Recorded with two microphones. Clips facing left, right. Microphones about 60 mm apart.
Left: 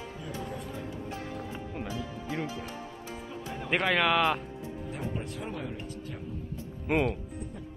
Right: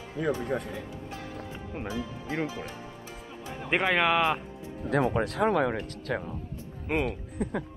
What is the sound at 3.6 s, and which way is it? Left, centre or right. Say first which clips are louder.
Speech: right 2 dB; centre.